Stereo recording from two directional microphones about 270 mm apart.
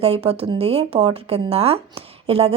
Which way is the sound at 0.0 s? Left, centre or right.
Right.